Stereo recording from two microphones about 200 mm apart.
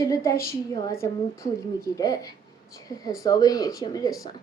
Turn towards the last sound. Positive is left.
turn(degrees=20)  # may be behind; listen again after turning